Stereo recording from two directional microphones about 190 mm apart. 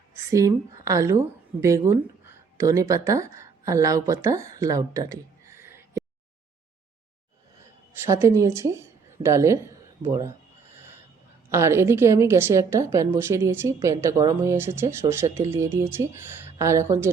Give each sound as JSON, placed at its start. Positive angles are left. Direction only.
{"t": 0.3, "sound": "a woman's voice", "side_deg": -15}
{"t": 8.0, "sound": "a woman's voice", "side_deg": -15}
{"t": 11.5, "sound": "a woman's voice", "side_deg": -15}